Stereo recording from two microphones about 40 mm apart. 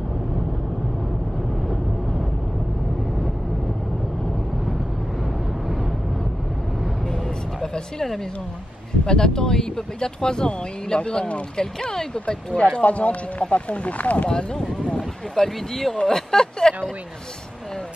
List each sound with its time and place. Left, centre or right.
7.6 s music: centre
9.0 s speech: centre
11.5 s speech: centre
12.8 s speech: left
14.5 s speech: centre